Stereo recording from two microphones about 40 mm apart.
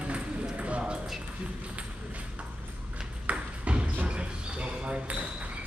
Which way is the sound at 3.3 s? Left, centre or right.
Right.